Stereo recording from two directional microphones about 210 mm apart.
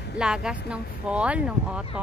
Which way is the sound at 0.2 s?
5° right (ahead or behind).